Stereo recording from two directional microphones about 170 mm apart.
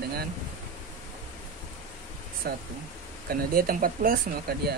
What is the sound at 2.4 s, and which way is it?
Speech, 60° right (ahead or behind).